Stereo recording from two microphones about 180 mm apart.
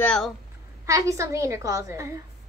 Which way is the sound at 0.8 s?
15° right (ahead or behind).